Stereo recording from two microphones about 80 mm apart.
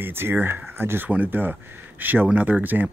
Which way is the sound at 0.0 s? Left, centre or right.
Right.